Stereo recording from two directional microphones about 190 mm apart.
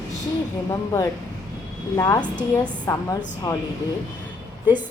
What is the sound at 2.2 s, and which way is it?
Speech, 5° left (ahead or behind).